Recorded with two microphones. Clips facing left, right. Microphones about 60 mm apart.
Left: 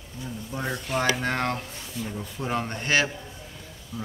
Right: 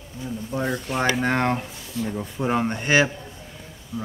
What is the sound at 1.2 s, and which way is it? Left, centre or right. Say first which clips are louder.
Speech: right 5 dB; right.